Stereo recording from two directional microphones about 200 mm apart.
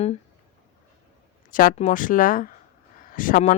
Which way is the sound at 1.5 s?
45° left (ahead or behind).